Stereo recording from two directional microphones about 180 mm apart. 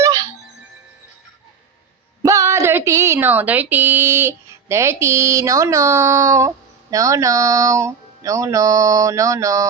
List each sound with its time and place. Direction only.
0.0 s music: 15° right (ahead or behind)
2.2 s a woman's voice: 15° right (ahead or behind)